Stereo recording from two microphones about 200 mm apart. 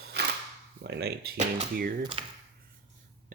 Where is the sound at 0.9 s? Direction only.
55° right (ahead or behind).